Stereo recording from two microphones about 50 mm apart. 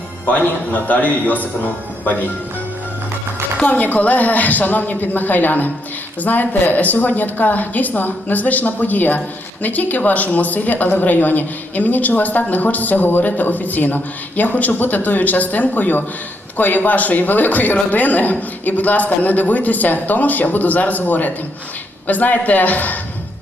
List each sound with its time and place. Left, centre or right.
0.3 s a man's voice: left
3.7 s a man's voice: left